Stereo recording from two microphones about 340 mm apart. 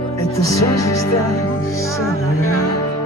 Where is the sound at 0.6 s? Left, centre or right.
Left.